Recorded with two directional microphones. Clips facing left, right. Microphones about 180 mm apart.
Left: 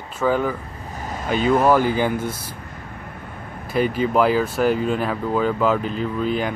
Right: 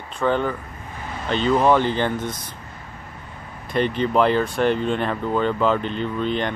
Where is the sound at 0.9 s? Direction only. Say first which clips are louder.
Left 3 dB; 40° left (ahead or behind).